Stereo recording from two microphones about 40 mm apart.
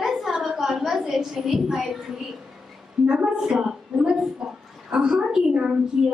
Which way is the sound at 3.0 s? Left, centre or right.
Centre.